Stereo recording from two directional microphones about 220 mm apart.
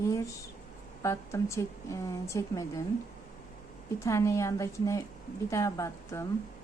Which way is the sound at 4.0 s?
15° left (ahead or behind).